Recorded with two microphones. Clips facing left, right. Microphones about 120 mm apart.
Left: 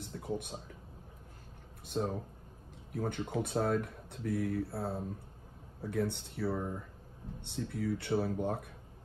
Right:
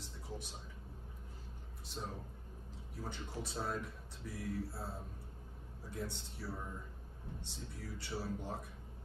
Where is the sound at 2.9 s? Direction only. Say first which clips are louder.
Left 11 dB; 55° left (ahead or behind).